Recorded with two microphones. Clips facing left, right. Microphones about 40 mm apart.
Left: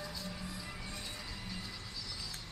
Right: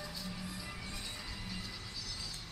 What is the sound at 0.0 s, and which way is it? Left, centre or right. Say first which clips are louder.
Music: even; centre.